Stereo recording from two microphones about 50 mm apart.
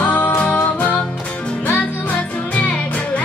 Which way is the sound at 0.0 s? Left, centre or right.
Left.